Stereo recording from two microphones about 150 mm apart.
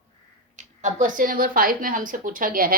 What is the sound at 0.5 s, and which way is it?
A woman's voice, 55° right (ahead or behind).